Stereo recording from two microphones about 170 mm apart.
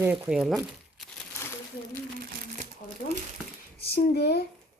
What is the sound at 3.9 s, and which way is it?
Speech, 70° left (ahead or behind).